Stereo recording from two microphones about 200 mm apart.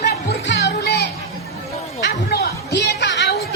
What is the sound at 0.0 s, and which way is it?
Music, 60° left (ahead or behind).